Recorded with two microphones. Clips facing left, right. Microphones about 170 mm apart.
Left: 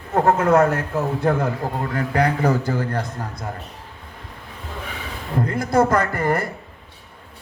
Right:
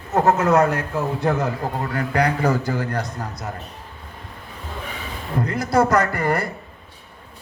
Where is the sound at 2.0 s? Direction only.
25° left (ahead or behind).